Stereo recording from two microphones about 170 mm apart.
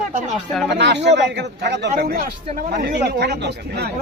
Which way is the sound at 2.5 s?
50° right (ahead or behind).